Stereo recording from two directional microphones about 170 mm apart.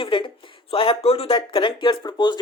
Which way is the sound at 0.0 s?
30° left (ahead or behind).